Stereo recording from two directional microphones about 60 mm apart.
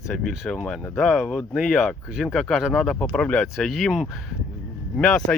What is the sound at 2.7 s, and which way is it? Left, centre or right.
Speech, centre.